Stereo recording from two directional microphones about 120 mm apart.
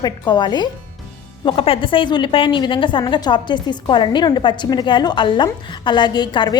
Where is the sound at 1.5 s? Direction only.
50° left (ahead or behind).